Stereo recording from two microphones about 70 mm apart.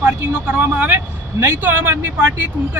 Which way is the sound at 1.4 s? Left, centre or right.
Right.